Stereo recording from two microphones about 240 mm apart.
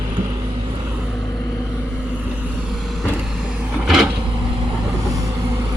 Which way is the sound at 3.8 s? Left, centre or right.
Centre.